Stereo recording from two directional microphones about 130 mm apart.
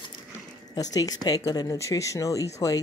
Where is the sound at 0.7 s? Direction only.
30° left (ahead or behind).